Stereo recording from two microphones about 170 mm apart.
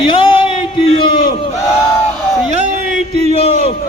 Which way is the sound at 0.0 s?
30° left (ahead or behind).